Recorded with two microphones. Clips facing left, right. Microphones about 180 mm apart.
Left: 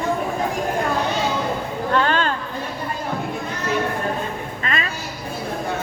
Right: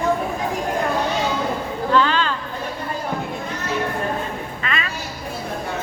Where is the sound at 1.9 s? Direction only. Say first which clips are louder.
Right 1 dB; 50° left (ahead or behind).